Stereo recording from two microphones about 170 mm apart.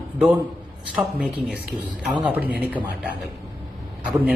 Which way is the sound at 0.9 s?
5° right (ahead or behind).